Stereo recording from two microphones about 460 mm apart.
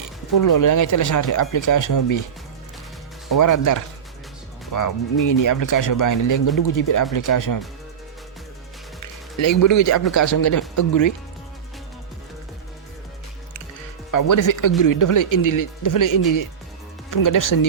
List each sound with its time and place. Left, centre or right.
0.3 s speech: left
3.2 s speech: left
9.4 s speech: left
14.1 s speech: left